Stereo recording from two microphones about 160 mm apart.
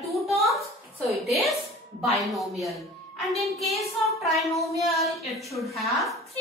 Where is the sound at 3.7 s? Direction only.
40° left (ahead or behind).